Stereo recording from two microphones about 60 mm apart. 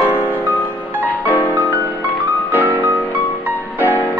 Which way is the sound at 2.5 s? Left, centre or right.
Right.